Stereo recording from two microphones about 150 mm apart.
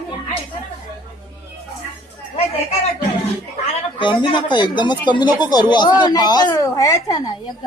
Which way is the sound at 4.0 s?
30° left (ahead or behind).